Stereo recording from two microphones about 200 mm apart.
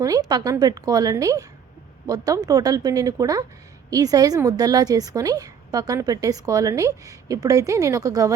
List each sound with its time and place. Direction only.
0.0 s a woman's voice: 20° right (ahead or behind)